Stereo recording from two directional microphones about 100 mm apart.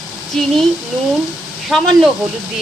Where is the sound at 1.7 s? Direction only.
5° left (ahead or behind).